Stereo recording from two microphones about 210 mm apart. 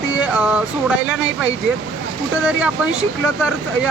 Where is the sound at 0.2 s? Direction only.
5° right (ahead or behind).